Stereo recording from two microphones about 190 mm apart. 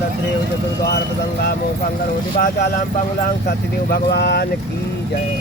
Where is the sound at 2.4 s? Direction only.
50° left (ahead or behind).